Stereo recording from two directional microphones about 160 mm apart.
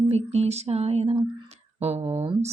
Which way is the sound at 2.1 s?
35° right (ahead or behind).